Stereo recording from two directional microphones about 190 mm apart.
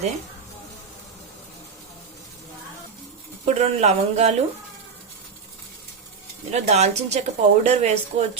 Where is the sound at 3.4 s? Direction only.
35° right (ahead or behind).